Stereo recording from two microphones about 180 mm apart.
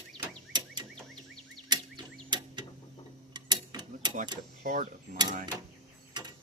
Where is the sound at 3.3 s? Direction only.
25° right (ahead or behind).